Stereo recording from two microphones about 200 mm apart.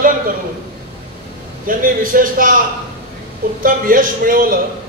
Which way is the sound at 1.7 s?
45° right (ahead or behind).